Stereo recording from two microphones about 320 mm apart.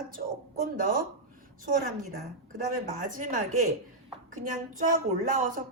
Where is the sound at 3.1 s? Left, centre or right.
Right.